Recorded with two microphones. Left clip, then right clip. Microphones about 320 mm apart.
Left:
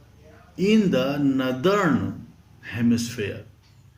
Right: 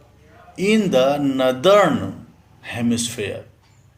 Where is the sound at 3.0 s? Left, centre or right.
Right.